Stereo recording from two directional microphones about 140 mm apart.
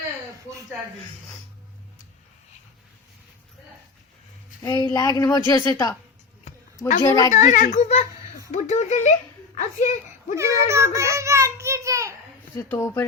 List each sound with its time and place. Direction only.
4.6 s a woman's voice: 30° left (ahead or behind)
7.0 s a woman's voice: 25° left (ahead or behind)
7.3 s a child's voice: 60° left (ahead or behind)
10.3 s a child's voice: 20° right (ahead or behind)
12.5 s speech: 20° left (ahead or behind)